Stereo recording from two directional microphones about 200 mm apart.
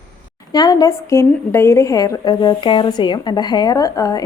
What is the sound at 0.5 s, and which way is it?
A woman's voice, 20° left (ahead or behind).